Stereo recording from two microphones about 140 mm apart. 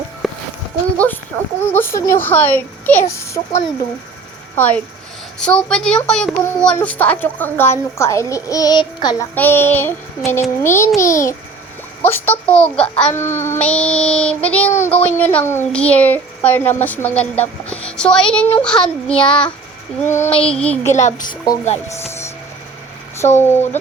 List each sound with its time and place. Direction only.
0.2 s a sound: centre (ahead or behind)
0.9 s a sound: 15° left (ahead or behind)
1.7 s speech: 15° left (ahead or behind)
9.3 s speech: 15° left (ahead or behind)
18.8 s child singing: 30° left (ahead or behind)
20.0 s speech: 15° left (ahead or behind)
20.2 s music: 40° left (ahead or behind)
20.6 s speech: 10° left (ahead or behind)
20.9 s speech: 65° left (ahead or behind); by 21.6 s 80° left
23.4 s speech: 15° left (ahead or behind)